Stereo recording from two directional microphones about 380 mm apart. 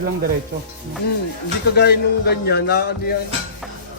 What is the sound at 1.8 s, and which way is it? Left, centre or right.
A man's voice, left.